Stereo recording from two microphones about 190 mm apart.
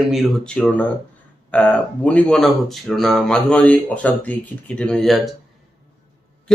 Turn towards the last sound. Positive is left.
turn(degrees=5)  # may be behind; listen again after turning